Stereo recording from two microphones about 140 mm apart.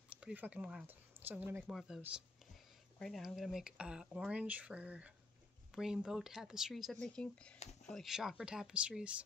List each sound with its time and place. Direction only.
0.2 s speech: 10° right (ahead or behind)
1.7 s speech: centre (ahead or behind)
7.5 s speech: 50° left (ahead or behind)
7.9 s speech: centre (ahead or behind)